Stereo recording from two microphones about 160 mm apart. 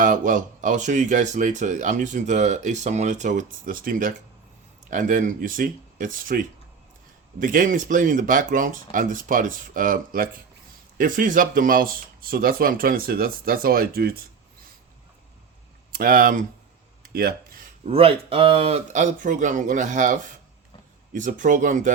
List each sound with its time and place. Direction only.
0.0 s speech: 55° right (ahead or behind)
15.9 s speech: 65° right (ahead or behind)
17.1 s a sound: 70° right (ahead or behind)
17.8 s speech: 35° right (ahead or behind); by 21.9 s 50° right (ahead or behind)